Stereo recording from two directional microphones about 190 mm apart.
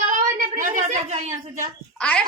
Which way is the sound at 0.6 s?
40° right (ahead or behind).